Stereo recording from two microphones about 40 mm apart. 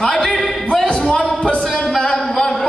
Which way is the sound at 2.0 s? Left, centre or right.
Centre.